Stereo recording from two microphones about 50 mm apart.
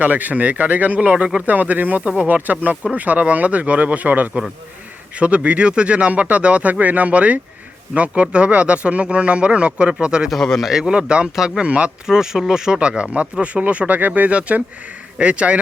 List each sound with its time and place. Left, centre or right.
0.0 s speech: right
12.0 s speech: centre
13.4 s speech: right